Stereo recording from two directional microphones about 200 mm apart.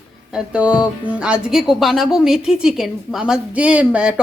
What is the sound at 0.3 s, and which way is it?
Speech, 5° right (ahead or behind).